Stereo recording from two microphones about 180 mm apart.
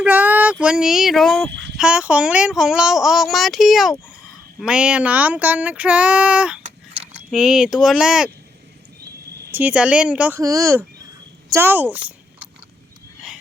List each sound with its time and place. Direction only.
0.0 s a sound: 10° right (ahead or behind)
0.6 s speech: 5° right (ahead or behind)
1.5 s a sound: 80° right
1.7 s speech: 5° right (ahead or behind)
4.6 s child singing: 5° right (ahead or behind)
6.7 s a sound: 35° right (ahead or behind)
7.2 s speech: 5° right (ahead or behind)
9.5 s child singing: 10° right (ahead or behind)
11.5 s speech: 10° right (ahead or behind)